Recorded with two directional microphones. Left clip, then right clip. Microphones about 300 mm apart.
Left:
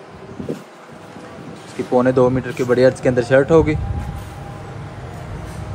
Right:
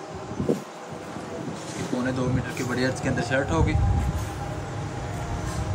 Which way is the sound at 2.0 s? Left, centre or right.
Centre.